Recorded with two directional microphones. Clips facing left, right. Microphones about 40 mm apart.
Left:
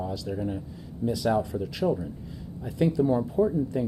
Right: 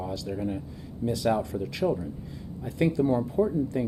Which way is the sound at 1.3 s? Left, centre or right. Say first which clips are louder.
Left 2 dB; centre.